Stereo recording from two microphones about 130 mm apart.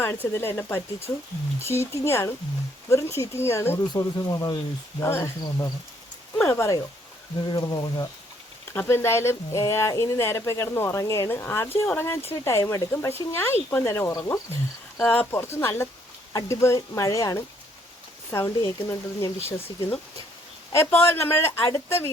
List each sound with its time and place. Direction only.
0.0 s speech: 20° left (ahead or behind)
8.7 s speech: 15° left (ahead or behind)